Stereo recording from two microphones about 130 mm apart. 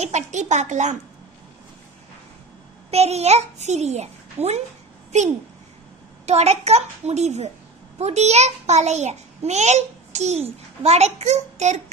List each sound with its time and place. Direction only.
0.0 s a child's voice: 65° right (ahead or behind)
2.9 s a child's voice: 55° right (ahead or behind)
6.2 s a child's voice: 55° right (ahead or behind)